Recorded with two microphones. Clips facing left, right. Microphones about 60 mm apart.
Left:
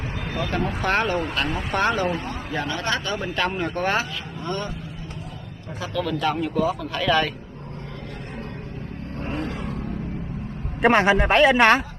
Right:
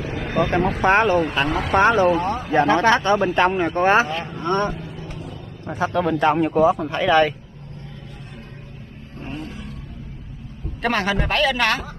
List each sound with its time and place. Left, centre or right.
0.0 s vehicle: centre
0.4 s speech: right
1.5 s speech: right
1.8 s speech: right
2.1 s speech: right
2.9 s speech: right
5.8 s speech: right
9.3 s roar: left
10.8 s a man's voice: left